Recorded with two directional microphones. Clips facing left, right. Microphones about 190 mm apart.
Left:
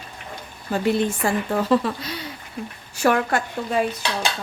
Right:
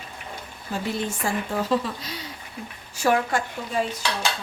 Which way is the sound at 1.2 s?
60° left (ahead or behind).